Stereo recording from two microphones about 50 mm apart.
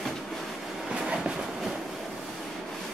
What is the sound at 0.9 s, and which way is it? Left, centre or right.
Train, centre.